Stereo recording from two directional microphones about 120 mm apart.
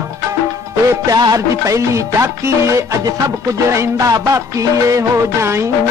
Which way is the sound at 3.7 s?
30° right (ahead or behind).